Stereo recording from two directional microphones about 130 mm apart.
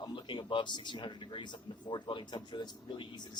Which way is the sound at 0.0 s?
35° left (ahead or behind).